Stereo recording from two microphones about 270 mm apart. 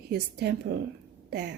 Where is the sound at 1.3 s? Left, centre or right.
Right.